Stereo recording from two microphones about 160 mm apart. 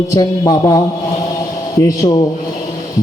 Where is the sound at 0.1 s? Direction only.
25° left (ahead or behind).